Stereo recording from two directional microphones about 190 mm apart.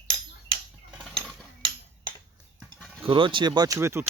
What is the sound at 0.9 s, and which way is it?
Mechanisms, centre (ahead or behind).